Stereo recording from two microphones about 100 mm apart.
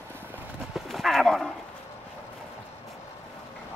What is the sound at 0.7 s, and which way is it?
Clip-clop, centre (ahead or behind).